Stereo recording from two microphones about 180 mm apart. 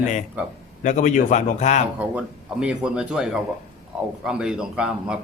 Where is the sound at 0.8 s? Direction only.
45° left (ahead or behind).